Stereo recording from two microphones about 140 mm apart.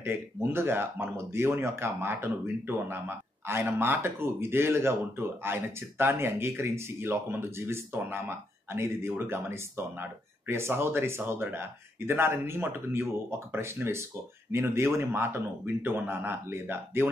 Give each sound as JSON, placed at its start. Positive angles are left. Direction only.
{"t": 0.0, "sound": "speech", "side_deg": -15}